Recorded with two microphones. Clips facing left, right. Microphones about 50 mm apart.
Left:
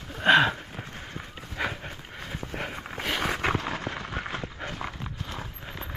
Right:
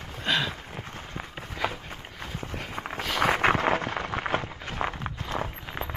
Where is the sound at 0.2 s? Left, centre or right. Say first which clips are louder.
Left 8 dB; left.